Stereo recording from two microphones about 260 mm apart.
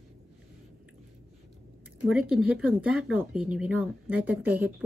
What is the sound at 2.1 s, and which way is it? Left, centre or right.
Speech, centre.